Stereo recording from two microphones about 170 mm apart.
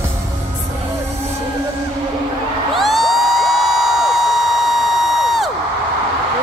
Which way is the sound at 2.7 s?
Centre (ahead or behind).